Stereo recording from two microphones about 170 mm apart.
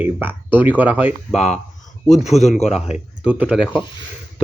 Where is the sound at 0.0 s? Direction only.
10° right (ahead or behind).